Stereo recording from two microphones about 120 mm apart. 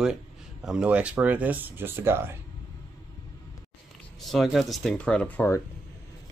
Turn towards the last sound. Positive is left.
turn(degrees=15)  # may be behind; listen again after turning